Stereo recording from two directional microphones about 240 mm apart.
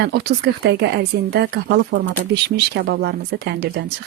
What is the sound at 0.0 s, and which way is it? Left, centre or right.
Speech, right.